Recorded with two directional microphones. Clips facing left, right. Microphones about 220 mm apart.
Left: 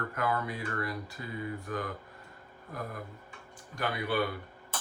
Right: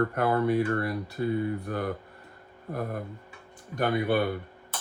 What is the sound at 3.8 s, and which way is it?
Speech, 50° right (ahead or behind).